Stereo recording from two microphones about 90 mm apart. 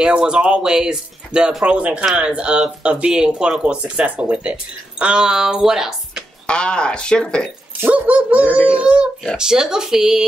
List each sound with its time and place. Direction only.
0.0 s speech: 10° right (ahead or behind)
6.4 s speech: 10° left (ahead or behind)
7.9 s speech: 15° right (ahead or behind)